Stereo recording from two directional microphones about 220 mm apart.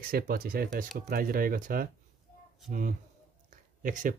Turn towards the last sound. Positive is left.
turn(degrees=-35)  # may be behind; listen again after turning